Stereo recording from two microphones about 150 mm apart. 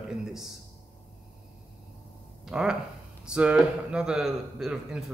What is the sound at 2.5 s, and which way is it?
A man's voice, 5° right (ahead or behind).